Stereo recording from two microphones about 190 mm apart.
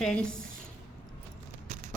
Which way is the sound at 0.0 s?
5° left (ahead or behind).